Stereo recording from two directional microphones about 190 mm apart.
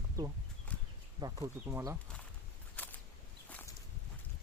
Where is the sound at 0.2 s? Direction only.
20° right (ahead or behind).